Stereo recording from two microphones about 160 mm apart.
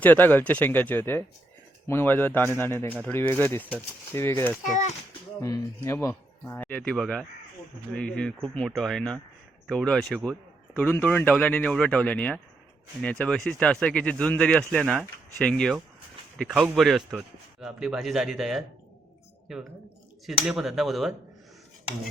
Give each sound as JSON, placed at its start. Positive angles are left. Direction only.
{"t": 0.0, "sound": "speech", "side_deg": 10}
{"t": 4.7, "sound": "a child's voice", "side_deg": 50}
{"t": 5.4, "sound": "speech", "side_deg": 20}